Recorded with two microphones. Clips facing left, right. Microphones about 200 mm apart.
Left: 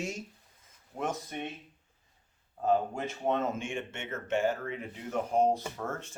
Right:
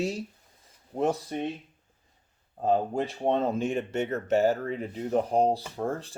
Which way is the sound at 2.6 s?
35° right (ahead or behind).